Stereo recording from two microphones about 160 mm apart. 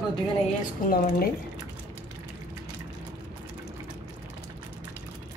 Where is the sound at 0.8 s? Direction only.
65° left (ahead or behind).